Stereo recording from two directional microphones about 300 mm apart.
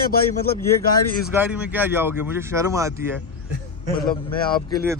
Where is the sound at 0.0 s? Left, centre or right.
Left.